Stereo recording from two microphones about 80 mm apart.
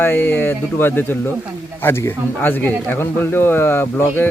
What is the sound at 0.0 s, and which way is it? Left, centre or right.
Speech, left.